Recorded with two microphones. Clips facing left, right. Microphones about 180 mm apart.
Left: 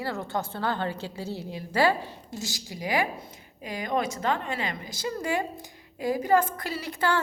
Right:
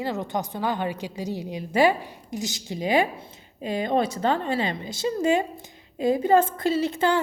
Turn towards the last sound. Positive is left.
turn(degrees=-20)  # may be behind; listen again after turning